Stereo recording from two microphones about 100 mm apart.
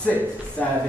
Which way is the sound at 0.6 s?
15° left (ahead or behind).